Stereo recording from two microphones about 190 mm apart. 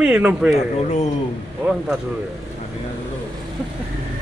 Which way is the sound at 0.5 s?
35° left (ahead or behind).